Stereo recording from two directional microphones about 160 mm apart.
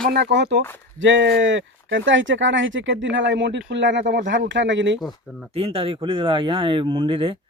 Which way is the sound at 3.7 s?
90° right.